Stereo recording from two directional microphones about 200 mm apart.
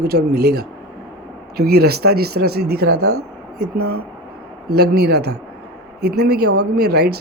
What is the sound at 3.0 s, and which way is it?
Speech, 90° right.